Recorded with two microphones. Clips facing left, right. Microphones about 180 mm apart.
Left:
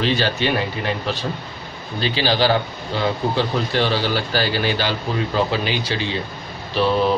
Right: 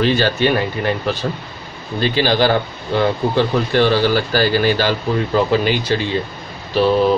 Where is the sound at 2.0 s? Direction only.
50° right (ahead or behind).